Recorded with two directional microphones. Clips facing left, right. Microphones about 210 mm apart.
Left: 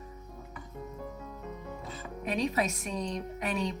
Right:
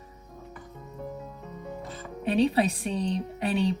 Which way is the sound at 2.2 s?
30° right (ahead or behind).